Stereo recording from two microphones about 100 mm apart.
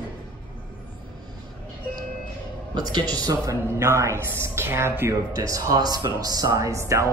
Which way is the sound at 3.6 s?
25° right (ahead or behind).